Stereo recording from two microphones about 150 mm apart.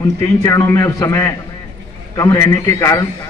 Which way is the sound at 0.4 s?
20° left (ahead or behind).